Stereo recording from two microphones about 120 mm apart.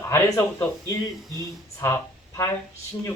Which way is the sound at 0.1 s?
20° left (ahead or behind).